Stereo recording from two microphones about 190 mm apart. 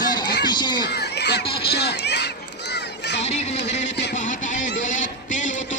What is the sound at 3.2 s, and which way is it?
Music, 35° left (ahead or behind).